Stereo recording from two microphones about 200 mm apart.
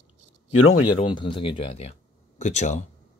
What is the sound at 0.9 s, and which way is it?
Speech, 25° left (ahead or behind).